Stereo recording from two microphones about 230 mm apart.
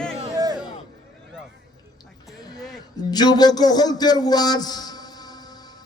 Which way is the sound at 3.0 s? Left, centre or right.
Centre.